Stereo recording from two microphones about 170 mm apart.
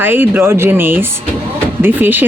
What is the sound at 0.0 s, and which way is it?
A woman's voice, 10° right (ahead or behind).